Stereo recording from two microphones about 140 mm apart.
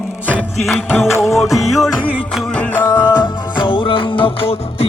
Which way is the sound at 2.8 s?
20° left (ahead or behind).